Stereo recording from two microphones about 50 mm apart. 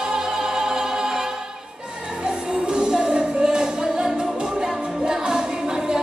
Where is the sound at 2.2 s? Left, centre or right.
Centre.